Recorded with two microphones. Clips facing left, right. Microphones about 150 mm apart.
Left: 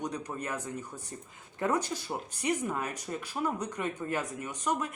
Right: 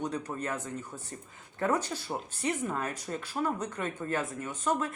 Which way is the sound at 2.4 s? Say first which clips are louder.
Left 1 dB; 10° left (ahead or behind).